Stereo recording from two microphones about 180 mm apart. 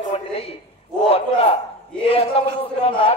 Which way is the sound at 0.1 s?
35° left (ahead or behind).